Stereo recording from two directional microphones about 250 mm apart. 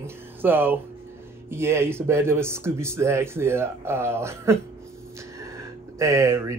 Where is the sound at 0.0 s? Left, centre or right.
Centre.